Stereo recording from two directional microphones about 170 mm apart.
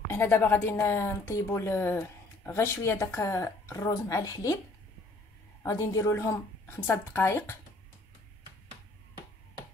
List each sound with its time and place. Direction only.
0.1 s a woman's voice: 15° left (ahead or behind)
5.6 s a woman's voice: 20° left (ahead or behind)